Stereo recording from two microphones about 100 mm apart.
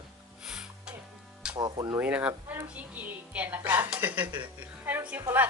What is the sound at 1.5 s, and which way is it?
Speech, 45° right (ahead or behind).